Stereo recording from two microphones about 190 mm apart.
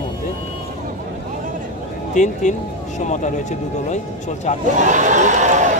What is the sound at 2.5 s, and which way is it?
Speech, 40° left (ahead or behind).